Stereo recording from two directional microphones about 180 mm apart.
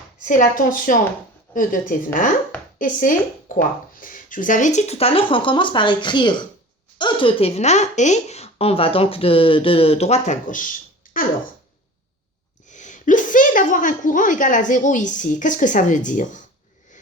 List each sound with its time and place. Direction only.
0.2 s a woman's voice: 45° left (ahead or behind)
12.7 s speech: 45° left (ahead or behind)